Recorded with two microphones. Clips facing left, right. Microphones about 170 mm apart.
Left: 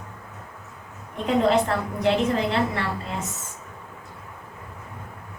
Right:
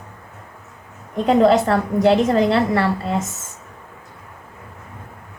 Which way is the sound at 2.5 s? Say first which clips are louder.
Right 7 dB; 80° right.